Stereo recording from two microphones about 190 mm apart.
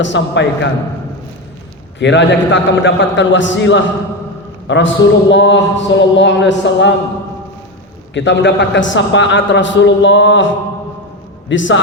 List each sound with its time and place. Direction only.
0.0 s a man's voice: 70° left (ahead or behind)
2.0 s a man's voice: 70° left (ahead or behind)
8.1 s a man's voice: 70° left (ahead or behind)